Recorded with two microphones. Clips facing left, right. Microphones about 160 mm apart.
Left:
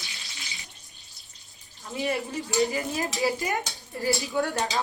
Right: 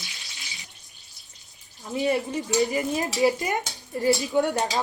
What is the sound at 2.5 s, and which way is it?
Speech, 20° right (ahead or behind).